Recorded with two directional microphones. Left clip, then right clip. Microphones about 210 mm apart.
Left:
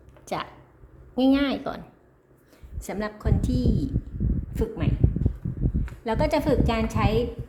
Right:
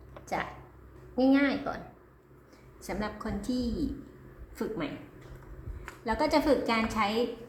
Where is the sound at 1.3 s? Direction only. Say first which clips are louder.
Left 3 dB; 50° left (ahead or behind).